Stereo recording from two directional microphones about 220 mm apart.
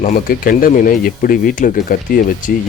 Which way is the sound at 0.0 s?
40° left (ahead or behind).